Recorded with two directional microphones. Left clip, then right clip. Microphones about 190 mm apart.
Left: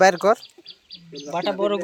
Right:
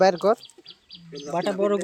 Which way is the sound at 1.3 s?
45° right (ahead or behind).